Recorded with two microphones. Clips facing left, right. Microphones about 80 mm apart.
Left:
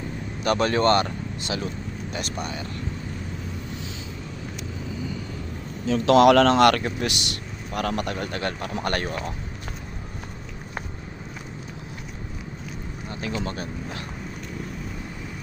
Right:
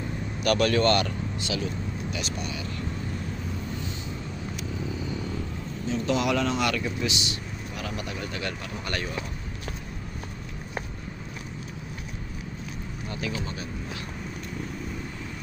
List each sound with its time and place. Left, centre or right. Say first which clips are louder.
0.4 s speech: left 2 dB; left
5.8 s speech: left 10 dB; left
13.1 s a sound: left 2 dB; left
13.4 s speech: left 5 dB; left